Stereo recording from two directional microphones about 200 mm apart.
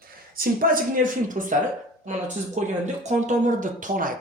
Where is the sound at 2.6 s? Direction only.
35° right (ahead or behind).